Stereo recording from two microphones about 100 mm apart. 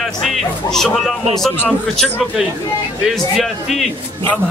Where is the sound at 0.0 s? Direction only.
Centre (ahead or behind).